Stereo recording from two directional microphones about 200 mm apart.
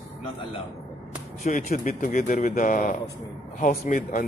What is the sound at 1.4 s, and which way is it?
Speech, 45° left (ahead or behind).